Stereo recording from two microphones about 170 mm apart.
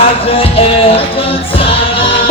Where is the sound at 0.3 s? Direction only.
35° left (ahead or behind).